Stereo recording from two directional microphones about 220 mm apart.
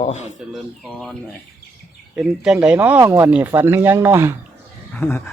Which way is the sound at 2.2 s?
5° right (ahead or behind).